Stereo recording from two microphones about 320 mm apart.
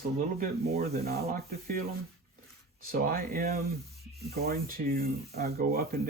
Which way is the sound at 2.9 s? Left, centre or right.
Right.